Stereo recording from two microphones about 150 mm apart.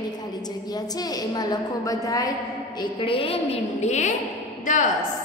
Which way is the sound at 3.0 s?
35° left (ahead or behind).